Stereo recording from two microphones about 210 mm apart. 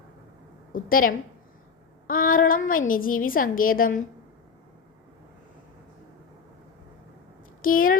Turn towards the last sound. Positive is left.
turn(degrees=40)  # may be behind; listen again after turning